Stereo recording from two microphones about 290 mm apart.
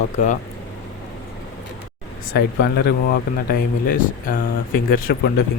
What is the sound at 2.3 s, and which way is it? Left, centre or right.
Speech, left.